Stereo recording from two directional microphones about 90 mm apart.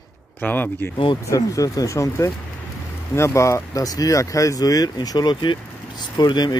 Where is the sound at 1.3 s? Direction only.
40° left (ahead or behind).